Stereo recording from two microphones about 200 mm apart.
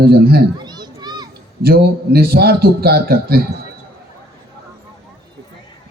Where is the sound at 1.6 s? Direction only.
50° right (ahead or behind).